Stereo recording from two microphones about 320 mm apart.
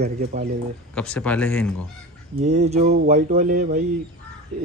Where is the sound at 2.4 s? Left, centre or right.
Right.